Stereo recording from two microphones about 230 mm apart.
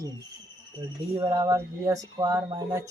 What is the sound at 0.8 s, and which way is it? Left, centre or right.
Speech, centre.